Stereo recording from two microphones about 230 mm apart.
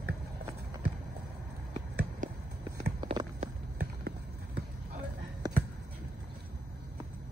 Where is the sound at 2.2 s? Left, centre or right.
Right.